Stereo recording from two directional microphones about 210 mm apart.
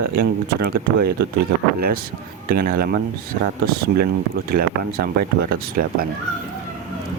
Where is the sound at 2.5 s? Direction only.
45° right (ahead or behind).